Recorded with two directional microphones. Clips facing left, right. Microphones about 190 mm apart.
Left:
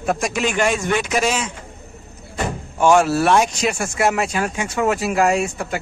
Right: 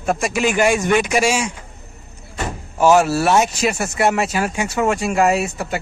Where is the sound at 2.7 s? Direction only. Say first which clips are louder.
Right 1 dB; 5° right (ahead or behind).